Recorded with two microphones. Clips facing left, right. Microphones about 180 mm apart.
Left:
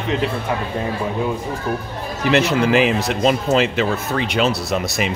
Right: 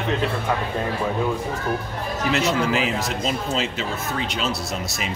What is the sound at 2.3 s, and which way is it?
Speech, 65° left (ahead or behind).